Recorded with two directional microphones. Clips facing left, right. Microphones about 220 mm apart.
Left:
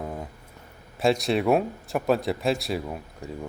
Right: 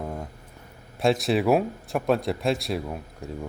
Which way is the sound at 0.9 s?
Centre (ahead or behind).